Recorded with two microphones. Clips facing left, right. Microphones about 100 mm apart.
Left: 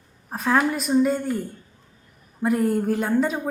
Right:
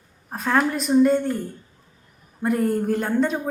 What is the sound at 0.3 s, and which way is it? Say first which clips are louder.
Speech: even; centre (ahead or behind).